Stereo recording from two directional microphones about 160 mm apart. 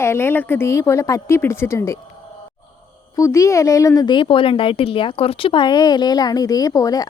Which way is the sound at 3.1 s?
20° left (ahead or behind).